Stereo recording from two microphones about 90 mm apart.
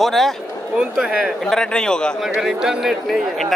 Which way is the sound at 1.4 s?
5° left (ahead or behind).